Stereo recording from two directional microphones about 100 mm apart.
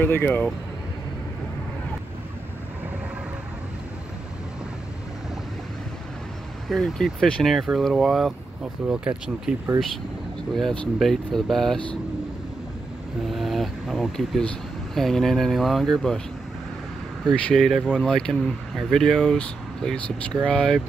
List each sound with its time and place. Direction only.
0.0 s speech: 20° left (ahead or behind)
6.7 s speech: 5° left (ahead or behind)
8.8 s speech: 10° right (ahead or behind)
10.5 s speech: 5° left (ahead or behind)
13.3 s vehicle: centre (ahead or behind)
15.0 s speech: 5° left (ahead or behind)
17.3 s speech: 5° left (ahead or behind)